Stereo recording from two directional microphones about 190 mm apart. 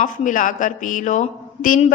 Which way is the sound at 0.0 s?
40° left (ahead or behind).